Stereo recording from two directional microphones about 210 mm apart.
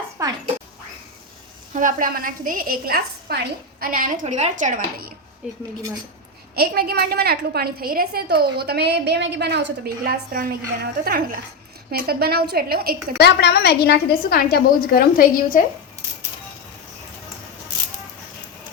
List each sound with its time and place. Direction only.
0.2 s a sound: 15° right (ahead or behind)
1.7 s a woman's voice: 40° right (ahead or behind)
5.4 s speech: 5° right (ahead or behind)
6.6 s a woman's voice: 45° right (ahead or behind)
13.1 s a woman's voice: 50° left (ahead or behind)